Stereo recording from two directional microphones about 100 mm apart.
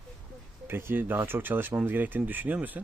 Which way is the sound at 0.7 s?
20° right (ahead or behind).